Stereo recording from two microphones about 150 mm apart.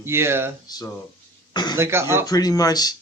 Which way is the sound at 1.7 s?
15° right (ahead or behind).